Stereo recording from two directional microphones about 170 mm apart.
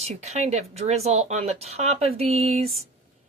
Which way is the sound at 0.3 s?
40° right (ahead or behind).